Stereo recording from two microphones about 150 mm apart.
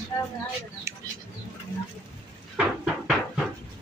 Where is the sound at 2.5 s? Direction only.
5° right (ahead or behind).